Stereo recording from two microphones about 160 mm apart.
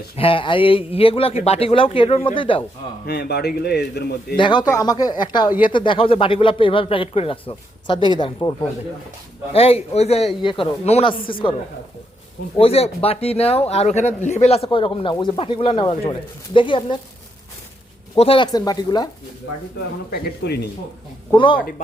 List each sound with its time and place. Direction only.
0.2 s speech: 35° left (ahead or behind)
3.1 s a man's voice: 90° left
4.4 s speech: 30° left (ahead or behind)
9.5 s speech: 40° left (ahead or behind)
12.5 s speech: 40° left (ahead or behind)
18.2 s speech: 35° left (ahead or behind)
20.1 s speech: 85° left
21.3 s speech: 30° left (ahead or behind)